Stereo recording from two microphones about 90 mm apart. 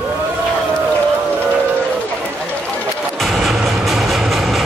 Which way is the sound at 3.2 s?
Centre (ahead or behind).